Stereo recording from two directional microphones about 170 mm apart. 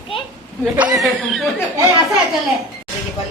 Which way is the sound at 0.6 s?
10° right (ahead or behind).